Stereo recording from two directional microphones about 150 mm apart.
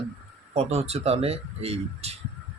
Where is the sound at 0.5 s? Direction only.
45° right (ahead or behind).